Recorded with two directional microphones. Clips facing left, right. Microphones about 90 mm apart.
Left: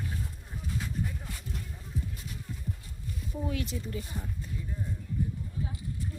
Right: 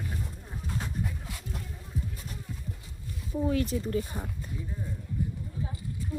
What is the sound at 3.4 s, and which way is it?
Speech, 40° right (ahead or behind).